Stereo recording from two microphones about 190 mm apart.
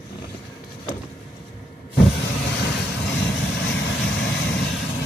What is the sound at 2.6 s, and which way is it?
Vehicle, 60° left (ahead or behind).